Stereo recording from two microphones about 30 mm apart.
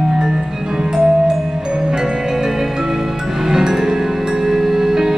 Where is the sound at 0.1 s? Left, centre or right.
Centre.